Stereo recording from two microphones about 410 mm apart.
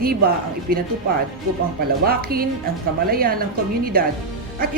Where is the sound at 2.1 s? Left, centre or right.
Right.